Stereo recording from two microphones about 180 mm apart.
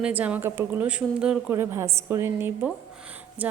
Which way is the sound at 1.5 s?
15° right (ahead or behind).